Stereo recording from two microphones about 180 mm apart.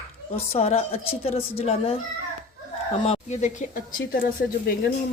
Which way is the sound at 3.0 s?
40° left (ahead or behind).